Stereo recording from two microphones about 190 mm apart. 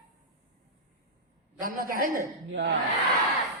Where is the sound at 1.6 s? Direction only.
50° right (ahead or behind).